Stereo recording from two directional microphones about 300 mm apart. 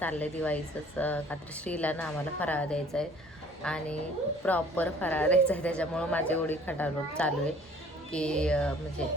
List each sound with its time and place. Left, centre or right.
0.0 s a woman's voice: centre